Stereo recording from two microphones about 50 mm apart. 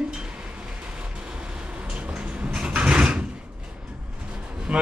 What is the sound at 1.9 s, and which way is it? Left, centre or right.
Sliding door, right.